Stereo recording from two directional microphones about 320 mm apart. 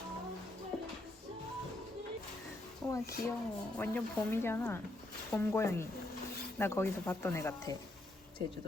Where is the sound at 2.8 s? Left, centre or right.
Centre.